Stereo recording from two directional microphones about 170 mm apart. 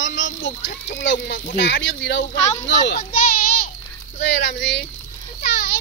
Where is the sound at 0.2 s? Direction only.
90° left.